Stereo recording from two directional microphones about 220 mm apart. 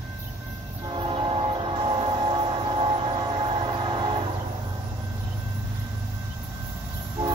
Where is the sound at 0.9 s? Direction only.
25° right (ahead or behind).